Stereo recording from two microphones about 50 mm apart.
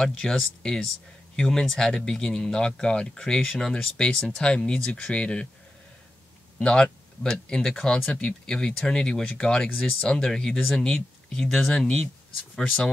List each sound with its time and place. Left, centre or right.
0.0 s speech: centre
6.6 s speech: centre
10.0 s speech: centre